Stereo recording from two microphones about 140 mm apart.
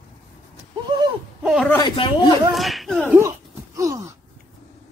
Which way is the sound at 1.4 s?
5° right (ahead or behind).